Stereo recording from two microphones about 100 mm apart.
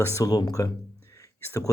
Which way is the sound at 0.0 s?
35° left (ahead or behind).